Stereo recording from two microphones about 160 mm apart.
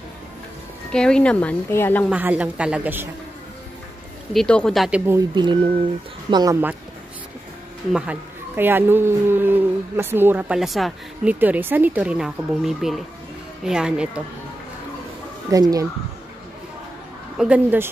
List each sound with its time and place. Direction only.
0.9 s speech: 5° left (ahead or behind)
2.0 s speech: 10° right (ahead or behind)
4.3 s speech: 5° left (ahead or behind)
5.3 s speech: 30° right (ahead or behind)
7.9 s speech: 10° right (ahead or behind)
11.3 s speech: 10° right (ahead or behind)
15.5 s speech: 20° right (ahead or behind)
17.4 s speech: 10° right (ahead or behind)